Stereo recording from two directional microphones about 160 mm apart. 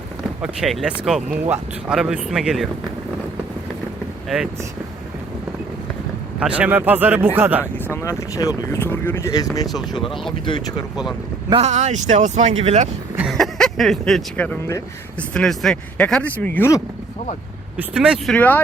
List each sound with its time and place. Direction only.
0.4 s speech: centre (ahead or behind)
6.4 s speech: 10° right (ahead or behind)
8.0 s speech: 20° left (ahead or behind)
10.4 s speech: 30° left (ahead or behind)
11.6 s speech: 45° right (ahead or behind)
13.1 s speech: centre (ahead or behind); by 16.8 s 15° left (ahead or behind)
17.7 s speech: 5° right (ahead or behind)
18.3 s speech: 10° left (ahead or behind)